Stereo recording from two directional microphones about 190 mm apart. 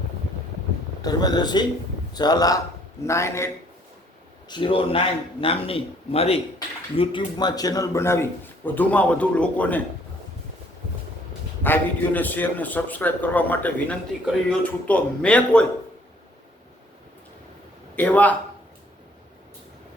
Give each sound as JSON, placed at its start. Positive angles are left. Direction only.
{"t": 1.0, "sound": "a man's voice", "side_deg": 20}
{"t": 4.4, "sound": "a man's voice", "side_deg": 25}
{"t": 11.6, "sound": "a man's voice", "side_deg": 10}
{"t": 17.9, "sound": "a man's voice", "side_deg": 10}